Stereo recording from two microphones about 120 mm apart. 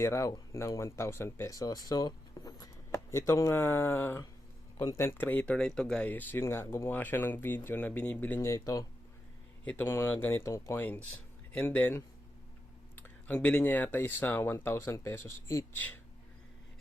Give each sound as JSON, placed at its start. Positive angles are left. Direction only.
{"t": 0.0, "sound": "speech", "side_deg": 25}
{"t": 8.4, "sound": "speech", "side_deg": 30}
{"t": 9.6, "sound": "speech", "side_deg": 15}